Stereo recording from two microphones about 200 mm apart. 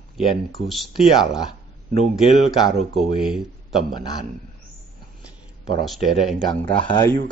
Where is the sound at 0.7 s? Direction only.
Centre (ahead or behind).